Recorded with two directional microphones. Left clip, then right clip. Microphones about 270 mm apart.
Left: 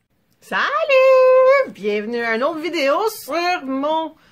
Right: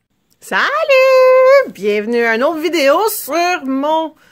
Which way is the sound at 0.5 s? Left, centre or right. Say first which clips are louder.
Right 4 dB; right.